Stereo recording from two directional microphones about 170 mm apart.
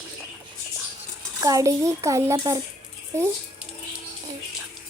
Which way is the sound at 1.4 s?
20° right (ahead or behind).